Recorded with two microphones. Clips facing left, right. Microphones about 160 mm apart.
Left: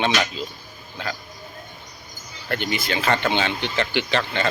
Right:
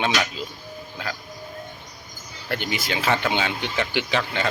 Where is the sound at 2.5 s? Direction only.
10° right (ahead or behind).